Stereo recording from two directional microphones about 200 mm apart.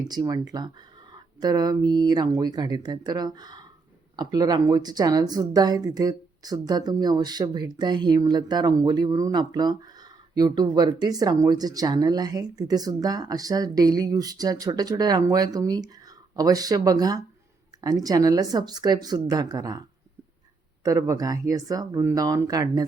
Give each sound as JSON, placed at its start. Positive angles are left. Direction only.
{"t": 0.1, "sound": "speech", "side_deg": -20}
{"t": 20.8, "sound": "speech", "side_deg": -15}